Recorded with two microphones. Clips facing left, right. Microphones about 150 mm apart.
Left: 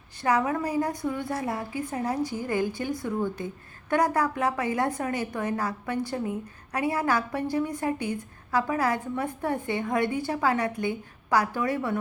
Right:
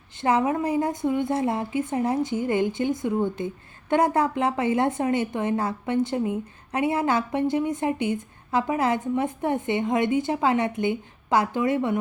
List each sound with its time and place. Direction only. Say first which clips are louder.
0.2 s a woman's voice: right 3 dB; 25° right (ahead or behind)